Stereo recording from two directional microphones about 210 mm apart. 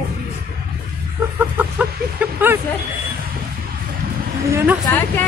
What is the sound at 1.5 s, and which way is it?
Speech, 10° right (ahead or behind).